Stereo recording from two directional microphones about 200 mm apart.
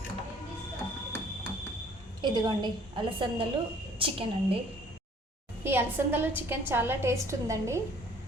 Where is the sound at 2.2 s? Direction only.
20° right (ahead or behind).